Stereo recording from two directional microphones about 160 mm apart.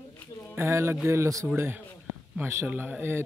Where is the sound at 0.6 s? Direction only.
15° right (ahead or behind).